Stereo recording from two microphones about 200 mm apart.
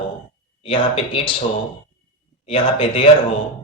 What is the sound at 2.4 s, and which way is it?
Speech, 30° left (ahead or behind).